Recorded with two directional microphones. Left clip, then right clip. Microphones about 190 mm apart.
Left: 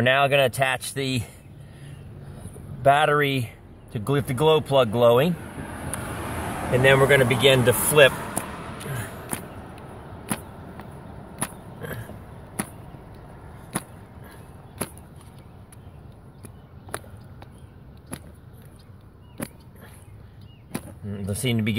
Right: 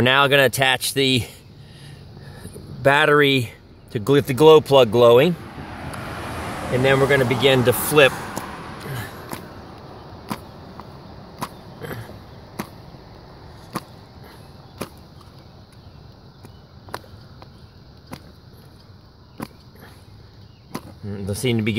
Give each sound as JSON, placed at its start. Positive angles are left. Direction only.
{"t": 0.0, "sound": "speech", "side_deg": -50}
{"t": 2.8, "sound": "speech", "side_deg": -50}
{"t": 5.5, "sound": "vehicle", "side_deg": 40}
{"t": 6.8, "sound": "vehicle", "side_deg": -20}
{"t": 9.4, "sound": "a sound", "side_deg": -40}
{"t": 11.8, "sound": "vehicle", "side_deg": -40}
{"t": 21.1, "sound": "a sound", "side_deg": -40}